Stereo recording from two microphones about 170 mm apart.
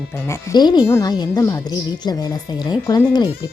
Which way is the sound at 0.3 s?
20° left (ahead or behind).